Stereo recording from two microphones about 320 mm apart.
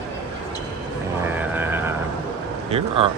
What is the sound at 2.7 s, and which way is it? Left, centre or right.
Speech, centre.